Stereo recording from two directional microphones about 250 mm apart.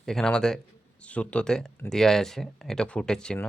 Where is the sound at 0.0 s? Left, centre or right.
Centre.